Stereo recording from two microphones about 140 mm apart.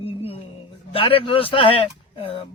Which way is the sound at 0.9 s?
40° left (ahead or behind).